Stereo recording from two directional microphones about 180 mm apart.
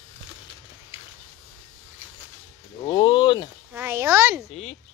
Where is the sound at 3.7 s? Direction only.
15° right (ahead or behind).